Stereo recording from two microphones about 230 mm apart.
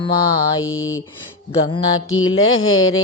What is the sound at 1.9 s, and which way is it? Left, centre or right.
Mantra, left.